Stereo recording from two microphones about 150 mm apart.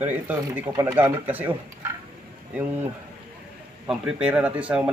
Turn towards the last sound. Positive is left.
turn(degrees=-10)  # may be behind; listen again after turning